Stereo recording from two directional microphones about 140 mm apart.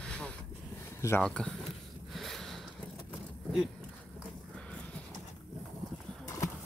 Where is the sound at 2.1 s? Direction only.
Centre (ahead or behind).